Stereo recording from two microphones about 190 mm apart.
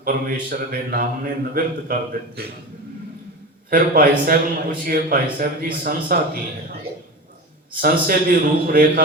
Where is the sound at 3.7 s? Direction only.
50° right (ahead or behind).